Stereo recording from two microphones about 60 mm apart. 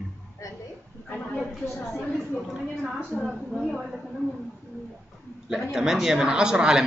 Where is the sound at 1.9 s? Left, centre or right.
Centre.